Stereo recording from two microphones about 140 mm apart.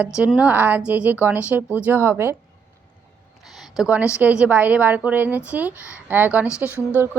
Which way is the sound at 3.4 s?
Centre (ahead or behind).